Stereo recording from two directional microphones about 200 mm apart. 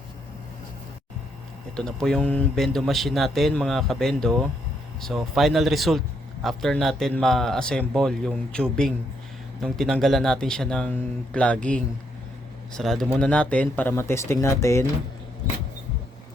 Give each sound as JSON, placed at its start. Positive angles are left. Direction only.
{"t": 1.7, "sound": "a man's voice", "side_deg": 5}